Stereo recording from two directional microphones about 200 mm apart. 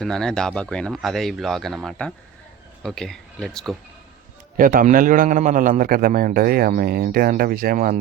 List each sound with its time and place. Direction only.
0.0 s speech: 5° left (ahead or behind)
4.5 s a man's voice: 45° right (ahead or behind)